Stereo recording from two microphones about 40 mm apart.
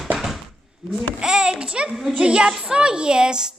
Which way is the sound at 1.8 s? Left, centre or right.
Centre.